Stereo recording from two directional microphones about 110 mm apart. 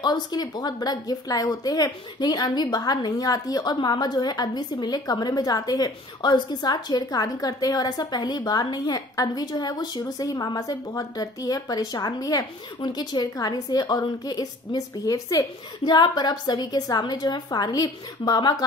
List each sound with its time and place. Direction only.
0.0 s a woman's voice: 40° left (ahead or behind)